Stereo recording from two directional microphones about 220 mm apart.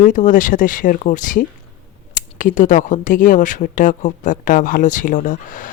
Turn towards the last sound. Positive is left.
turn(degrees=35)  # may be behind; listen again after turning